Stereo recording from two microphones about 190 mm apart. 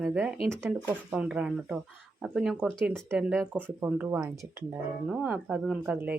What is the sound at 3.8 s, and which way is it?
Speech, 10° right (ahead or behind).